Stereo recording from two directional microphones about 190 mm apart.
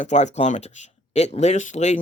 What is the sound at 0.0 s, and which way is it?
Speech, 40° left (ahead or behind).